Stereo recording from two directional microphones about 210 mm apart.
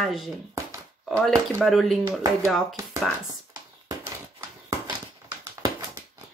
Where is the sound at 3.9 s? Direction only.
15° right (ahead or behind).